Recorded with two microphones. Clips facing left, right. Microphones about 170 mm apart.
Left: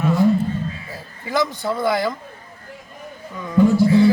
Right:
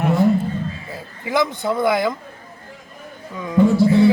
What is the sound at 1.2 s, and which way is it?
Speech, 20° right (ahead or behind).